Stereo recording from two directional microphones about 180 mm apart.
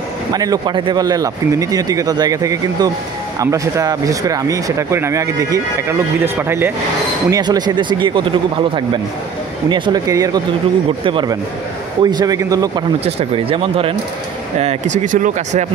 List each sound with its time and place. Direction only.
0.3 s speech: 20° right (ahead or behind)
13.0 s speech: 30° right (ahead or behind)